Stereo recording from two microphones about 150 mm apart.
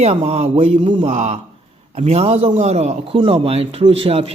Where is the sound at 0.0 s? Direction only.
40° right (ahead or behind).